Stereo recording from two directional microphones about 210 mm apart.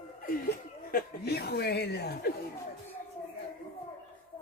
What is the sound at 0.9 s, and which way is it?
Chuckle, 45° left (ahead or behind).